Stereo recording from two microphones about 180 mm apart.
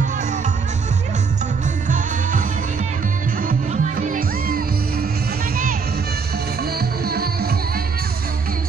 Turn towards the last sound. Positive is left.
turn(degrees=-60)  # may be behind; listen again after turning